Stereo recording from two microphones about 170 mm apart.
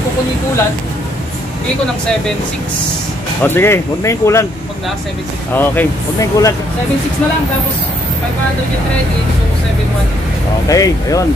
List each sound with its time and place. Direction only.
3.4 s speech: 15° left (ahead or behind)
5.5 s speech: 10° left (ahead or behind)
10.7 s speech: 20° left (ahead or behind)